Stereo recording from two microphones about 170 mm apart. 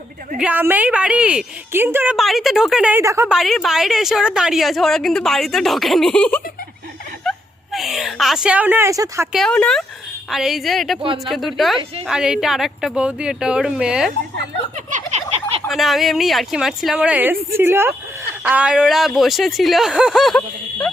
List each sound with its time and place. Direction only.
0.3 s a woman's voice: 10° right (ahead or behind)
2.1 s a woman's voice: centre (ahead or behind)
3.0 s a woman's voice: 15° right (ahead or behind)
3.2 s a woman's voice: centre (ahead or behind); by 9.3 s 20° right (ahead or behind)
9.3 s a woman's voice: 5° left (ahead or behind)
14.8 s a sound: 45° right (ahead or behind)
15.7 s a woman's voice: centre (ahead or behind)